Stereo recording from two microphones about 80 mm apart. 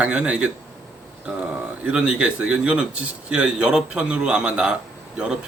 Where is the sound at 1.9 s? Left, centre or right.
Centre.